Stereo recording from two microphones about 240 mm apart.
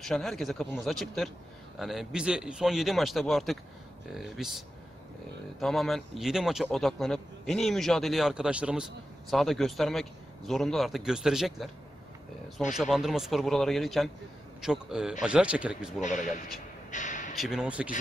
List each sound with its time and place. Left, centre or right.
0.0 s speech: centre
12.7 s speech: centre
16.0 s speech: left
16.9 s a sound: left
17.4 s speech: centre